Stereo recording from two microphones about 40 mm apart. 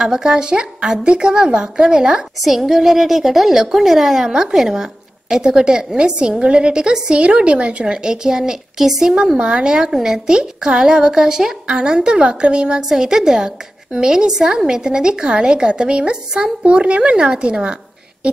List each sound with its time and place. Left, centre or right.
0.0 s a woman's voice: centre
2.4 s a woman's voice: centre
9.4 s a woman's voice: right
9.8 s a woman's voice: centre
12.8 s a woman's voice: centre
18.2 s a sound: right